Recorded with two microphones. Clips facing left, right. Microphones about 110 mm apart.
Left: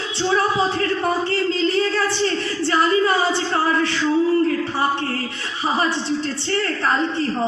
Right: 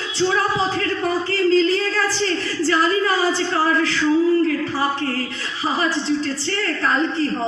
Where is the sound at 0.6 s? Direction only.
30° left (ahead or behind).